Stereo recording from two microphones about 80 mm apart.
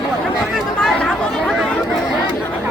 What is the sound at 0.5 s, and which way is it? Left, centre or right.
Chatter, centre.